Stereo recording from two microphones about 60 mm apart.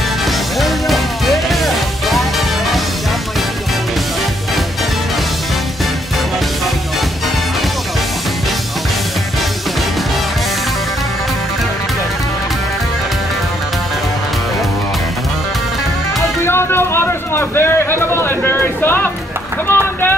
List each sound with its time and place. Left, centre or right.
0.6 s music: centre
16.4 s a sound: left
19.7 s vehicle: left